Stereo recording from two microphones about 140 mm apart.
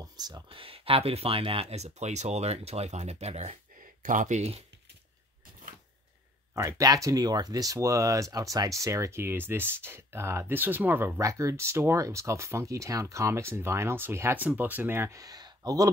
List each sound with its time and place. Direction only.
0.0 s speech: 30° right (ahead or behind); by 3.5 s 50° right (ahead or behind)
3.8 s speech: 70° right (ahead or behind); by 4.6 s 50° right (ahead or behind)
6.5 s speech: 25° right (ahead or behind)